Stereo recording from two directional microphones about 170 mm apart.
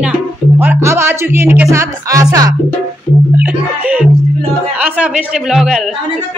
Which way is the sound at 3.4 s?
10° right (ahead or behind).